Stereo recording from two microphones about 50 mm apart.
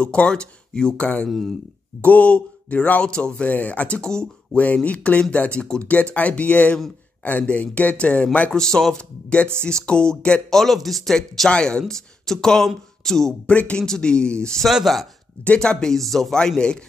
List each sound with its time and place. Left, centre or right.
0.0 s speech: centre
3.4 s speech: left
8.5 s speech: centre
10.5 s speech: centre
13.5 s speech: left
14.7 s speech: centre
15.4 s speech: left; by 16.3 s centre
16.3 s speech: centre